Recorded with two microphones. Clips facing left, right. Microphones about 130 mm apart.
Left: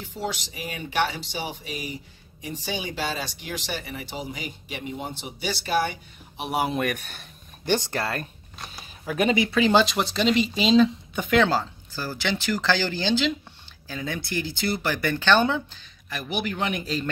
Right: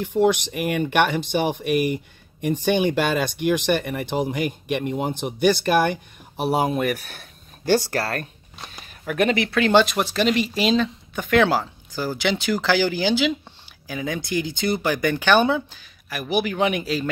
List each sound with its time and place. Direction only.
0.0 s speech: 55° right (ahead or behind)
6.4 s speech: 30° right (ahead or behind)
6.7 s speech: 5° right (ahead or behind)
9.0 s speech: 10° left (ahead or behind)
11.4 s speech: 10° right (ahead or behind)